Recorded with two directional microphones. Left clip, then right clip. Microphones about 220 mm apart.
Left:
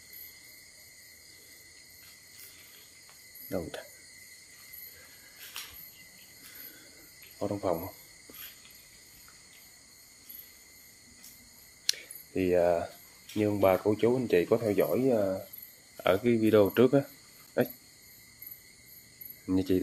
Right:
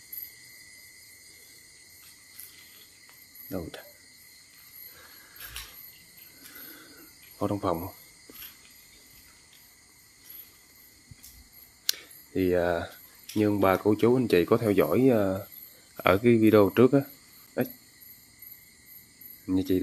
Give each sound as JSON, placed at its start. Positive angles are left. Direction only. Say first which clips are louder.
{"t": 3.4, "sound": "speech", "louder": "left 1 dB", "side_deg": 0}
{"t": 7.3, "sound": "speech", "louder": "right 3 dB", "side_deg": -30}
{"t": 11.8, "sound": "a sound", "louder": "right 1 dB", "side_deg": -15}
{"t": 13.4, "sound": "speech", "louder": "right 2 dB", "side_deg": -25}
{"t": 16.0, "sound": "speech", "louder": "right 5 dB", "side_deg": -25}
{"t": 17.6, "sound": "speech", "louder": "left 2 dB", "side_deg": -5}
{"t": 19.4, "sound": "speech", "louder": "right 1 dB", "side_deg": 0}